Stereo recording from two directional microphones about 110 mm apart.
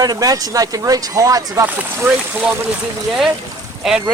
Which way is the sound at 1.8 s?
15° right (ahead or behind).